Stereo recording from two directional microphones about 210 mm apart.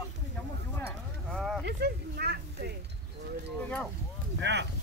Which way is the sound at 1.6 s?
50° right (ahead or behind).